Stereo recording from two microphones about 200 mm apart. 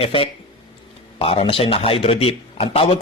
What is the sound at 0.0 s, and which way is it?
A man's voice, 25° left (ahead or behind).